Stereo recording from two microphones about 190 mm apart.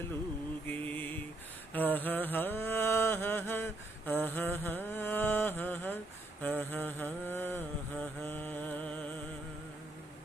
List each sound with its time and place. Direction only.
0.7 s mantra: 10° left (ahead or behind)